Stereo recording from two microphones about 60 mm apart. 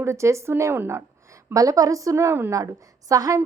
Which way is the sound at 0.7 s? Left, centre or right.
Right.